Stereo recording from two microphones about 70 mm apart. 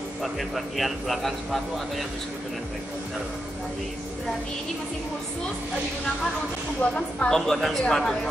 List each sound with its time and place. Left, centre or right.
0.2 s speech: centre
6.8 s a woman's voice: centre